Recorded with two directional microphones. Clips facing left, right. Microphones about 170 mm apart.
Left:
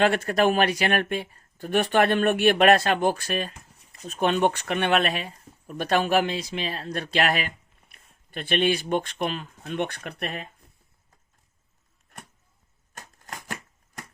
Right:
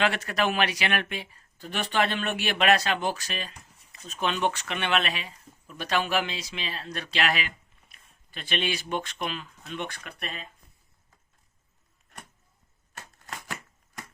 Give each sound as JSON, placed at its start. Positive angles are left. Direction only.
{"t": 0.0, "sound": "speech", "side_deg": 50}
{"t": 12.9, "sound": "shuffling cards", "side_deg": 45}